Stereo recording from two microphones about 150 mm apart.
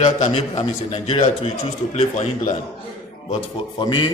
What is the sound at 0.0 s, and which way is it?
A man's voice, 45° left (ahead or behind).